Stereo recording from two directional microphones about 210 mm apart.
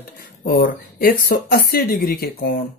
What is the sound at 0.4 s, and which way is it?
Speech, 45° left (ahead or behind).